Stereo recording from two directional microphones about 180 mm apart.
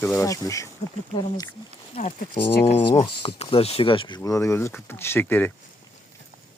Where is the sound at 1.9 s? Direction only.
40° left (ahead or behind); by 5.5 s 10° left (ahead or behind).